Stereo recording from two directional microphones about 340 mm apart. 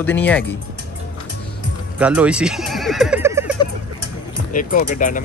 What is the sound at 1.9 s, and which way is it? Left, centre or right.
Speech, centre.